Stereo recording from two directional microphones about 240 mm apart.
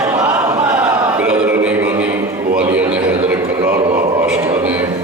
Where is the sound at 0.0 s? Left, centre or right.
Centre.